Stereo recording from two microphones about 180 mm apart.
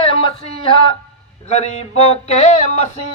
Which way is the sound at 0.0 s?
30° left (ahead or behind).